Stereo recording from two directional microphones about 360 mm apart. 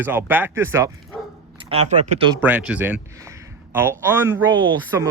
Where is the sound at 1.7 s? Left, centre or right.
Centre.